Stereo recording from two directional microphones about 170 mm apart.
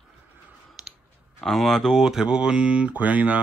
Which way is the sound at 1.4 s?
Centre (ahead or behind).